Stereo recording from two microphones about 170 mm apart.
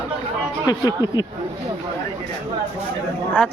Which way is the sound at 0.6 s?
25° left (ahead or behind).